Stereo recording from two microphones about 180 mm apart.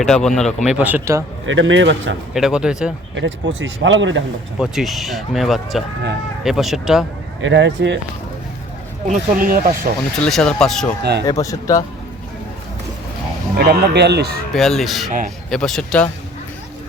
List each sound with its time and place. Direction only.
0.0 s speech: 5° left (ahead or behind); by 1.2 s 15° right (ahead or behind)
1.5 s speech: 90° right
2.3 s speech: 5° right (ahead or behind)
3.2 s speech: 90° right
4.6 s speech: centre (ahead or behind)
7.4 s speech: 90° right
9.0 s speech: 50° right (ahead or behind)
10.2 s speech: 5° left (ahead or behind)
11.3 s speech: 20° left (ahead or behind)
13.6 s speech: 65° right (ahead or behind)
14.5 s speech: centre (ahead or behind)